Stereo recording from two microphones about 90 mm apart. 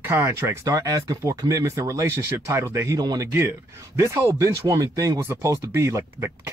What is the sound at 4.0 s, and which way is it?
Speech, 30° right (ahead or behind).